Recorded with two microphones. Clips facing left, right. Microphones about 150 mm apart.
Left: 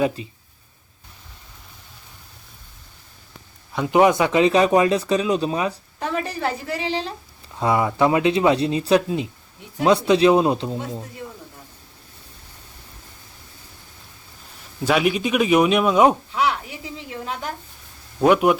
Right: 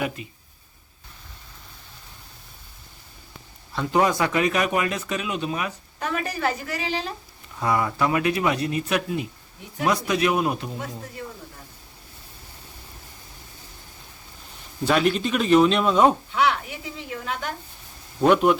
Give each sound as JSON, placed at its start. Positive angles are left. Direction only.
{"t": 0.2, "sound": "speech", "side_deg": 30}
{"t": 3.8, "sound": "speech", "side_deg": 20}
{"t": 14.8, "sound": "speech", "side_deg": 10}
{"t": 16.3, "sound": "speech", "side_deg": 30}
{"t": 18.2, "sound": "speech", "side_deg": 10}